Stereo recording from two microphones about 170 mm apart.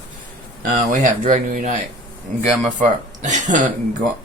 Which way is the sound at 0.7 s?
50° right (ahead or behind).